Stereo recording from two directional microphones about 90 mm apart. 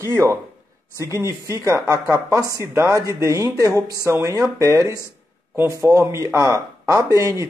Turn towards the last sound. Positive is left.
turn(degrees=-35)  # may be behind; listen again after turning